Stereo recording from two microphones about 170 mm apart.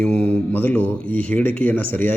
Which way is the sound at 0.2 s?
10° left (ahead or behind).